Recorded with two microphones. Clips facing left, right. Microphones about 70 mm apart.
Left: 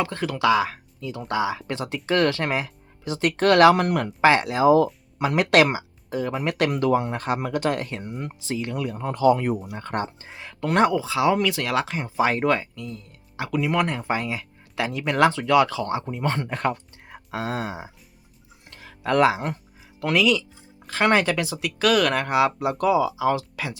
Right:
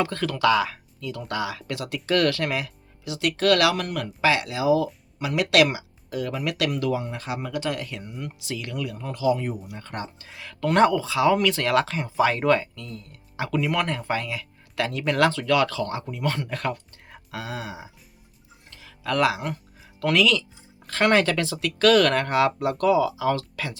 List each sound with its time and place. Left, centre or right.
0.0 s speech: centre; by 8.0 s left
8.0 s speech: left
8.4 s speech: left
9.7 s speech: left
10.2 s speech: left
18.7 s a sound: left
19.0 s speech: left
20.0 s speech: centre